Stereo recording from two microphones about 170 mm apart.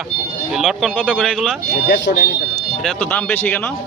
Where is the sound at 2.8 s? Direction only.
10° left (ahead or behind).